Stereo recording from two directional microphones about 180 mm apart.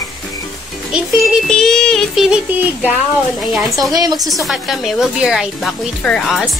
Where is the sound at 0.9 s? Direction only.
Centre (ahead or behind).